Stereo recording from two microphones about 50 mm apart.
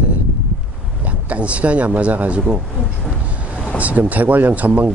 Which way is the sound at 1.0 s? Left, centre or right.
Right.